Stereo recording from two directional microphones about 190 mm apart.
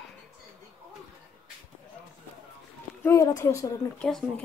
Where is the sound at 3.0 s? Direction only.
20° left (ahead or behind).